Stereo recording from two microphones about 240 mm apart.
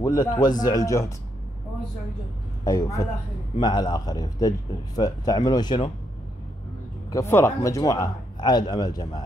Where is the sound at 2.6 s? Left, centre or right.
Centre.